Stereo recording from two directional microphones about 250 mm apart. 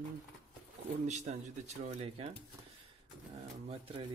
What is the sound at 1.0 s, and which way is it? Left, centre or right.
Speech, right.